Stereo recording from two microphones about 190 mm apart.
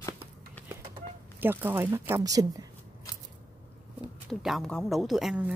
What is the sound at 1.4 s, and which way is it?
Speech, 10° right (ahead or behind).